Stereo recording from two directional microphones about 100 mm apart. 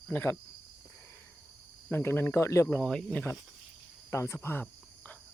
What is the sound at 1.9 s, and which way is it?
Speech, 20° left (ahead or behind).